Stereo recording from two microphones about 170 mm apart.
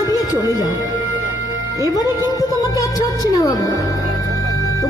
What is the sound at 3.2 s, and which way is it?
Music, 20° left (ahead or behind).